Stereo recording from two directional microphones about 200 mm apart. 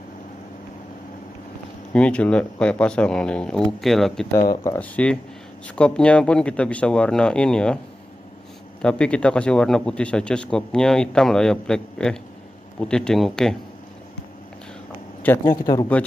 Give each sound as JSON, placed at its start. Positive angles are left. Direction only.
{"t": 1.9, "sound": "a man's voice", "side_deg": 5}
{"t": 8.8, "sound": "a man's voice", "side_deg": 5}
{"t": 15.5, "sound": "speech", "side_deg": 20}